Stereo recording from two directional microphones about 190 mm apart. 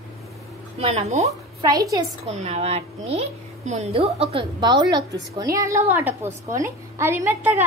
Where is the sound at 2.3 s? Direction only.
35° right (ahead or behind).